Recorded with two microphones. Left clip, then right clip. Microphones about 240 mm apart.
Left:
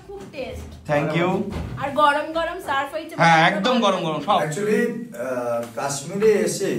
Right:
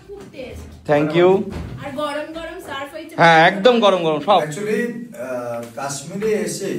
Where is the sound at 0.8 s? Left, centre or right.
Left.